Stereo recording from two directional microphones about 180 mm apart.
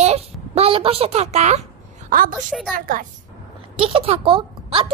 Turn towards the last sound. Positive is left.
turn(degrees=-30)  # may be behind; listen again after turning